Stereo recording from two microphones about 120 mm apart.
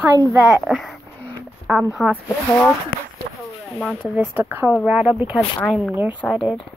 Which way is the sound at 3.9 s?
15° right (ahead or behind).